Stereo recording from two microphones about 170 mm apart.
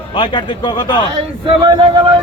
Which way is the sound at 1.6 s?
30° right (ahead or behind).